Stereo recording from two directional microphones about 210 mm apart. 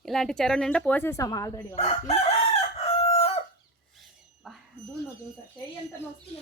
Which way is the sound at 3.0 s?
30° left (ahead or behind).